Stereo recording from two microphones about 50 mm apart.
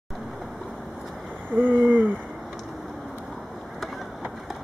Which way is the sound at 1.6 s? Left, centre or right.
Right.